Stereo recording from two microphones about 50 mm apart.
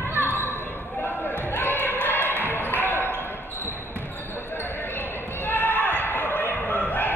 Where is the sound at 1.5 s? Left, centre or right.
Left.